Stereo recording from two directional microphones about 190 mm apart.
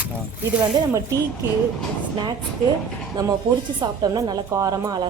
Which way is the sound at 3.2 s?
20° right (ahead or behind).